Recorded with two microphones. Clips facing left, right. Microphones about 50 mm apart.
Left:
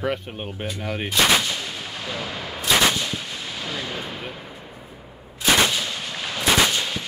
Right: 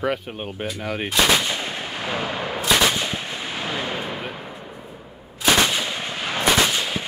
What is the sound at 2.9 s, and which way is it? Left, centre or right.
Gunshot, right.